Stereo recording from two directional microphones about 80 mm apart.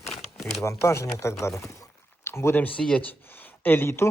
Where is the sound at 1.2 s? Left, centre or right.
Left.